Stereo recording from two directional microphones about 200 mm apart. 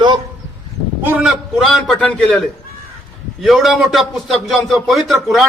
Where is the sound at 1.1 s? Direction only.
5° right (ahead or behind).